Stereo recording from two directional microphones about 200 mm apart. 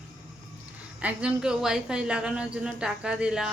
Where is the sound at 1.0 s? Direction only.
5° right (ahead or behind).